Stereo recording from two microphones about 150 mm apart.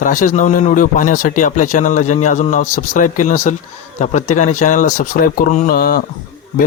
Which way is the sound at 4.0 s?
50° left (ahead or behind).